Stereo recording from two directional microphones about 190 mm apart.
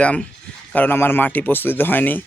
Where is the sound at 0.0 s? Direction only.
5° left (ahead or behind).